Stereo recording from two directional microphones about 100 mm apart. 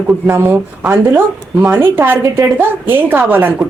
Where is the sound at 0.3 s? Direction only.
20° right (ahead or behind).